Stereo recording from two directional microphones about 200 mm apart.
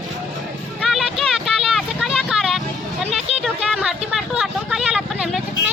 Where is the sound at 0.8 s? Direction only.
Centre (ahead or behind).